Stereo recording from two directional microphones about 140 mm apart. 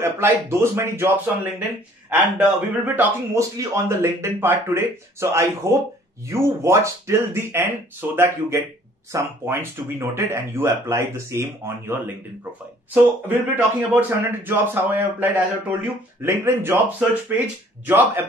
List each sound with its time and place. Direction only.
0.0 s a man's voice: 20° right (ahead or behind)
13.3 s a man's voice: 15° right (ahead or behind)